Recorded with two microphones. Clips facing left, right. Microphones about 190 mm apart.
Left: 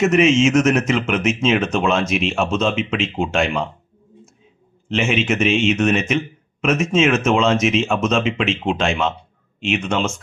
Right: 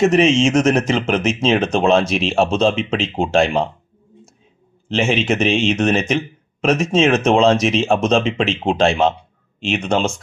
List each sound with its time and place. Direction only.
0.0 s speech: 35° right (ahead or behind)
4.9 s speech: 35° right (ahead or behind)